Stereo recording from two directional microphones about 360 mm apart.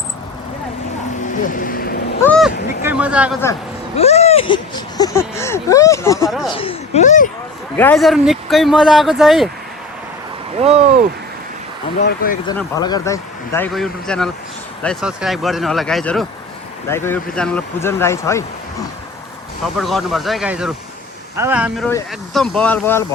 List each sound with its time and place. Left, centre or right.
1.4 s speech: left
2.2 s speech: centre
3.9 s speech: centre
6.2 s a sound: centre
6.6 s speech: centre
7.8 s a man's voice: centre
10.6 s speech: centre
12.0 s speech: left
12.5 s a man's voice: centre
19.8 s a man's voice: centre